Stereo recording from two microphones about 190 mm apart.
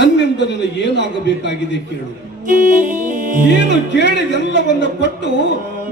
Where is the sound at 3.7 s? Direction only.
65° left (ahead or behind).